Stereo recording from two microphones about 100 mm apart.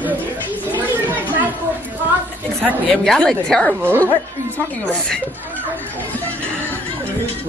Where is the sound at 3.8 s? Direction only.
20° right (ahead or behind).